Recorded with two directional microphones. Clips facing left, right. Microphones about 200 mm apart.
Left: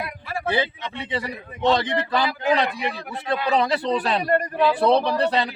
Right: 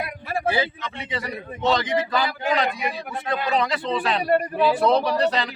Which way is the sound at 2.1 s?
30° left (ahead or behind).